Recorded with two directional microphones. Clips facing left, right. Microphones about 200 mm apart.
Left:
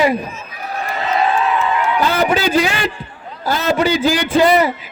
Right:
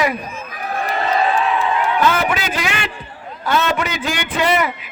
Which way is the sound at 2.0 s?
35° left (ahead or behind).